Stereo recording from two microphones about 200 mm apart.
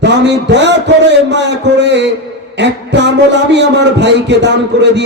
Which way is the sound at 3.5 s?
60° right (ahead or behind).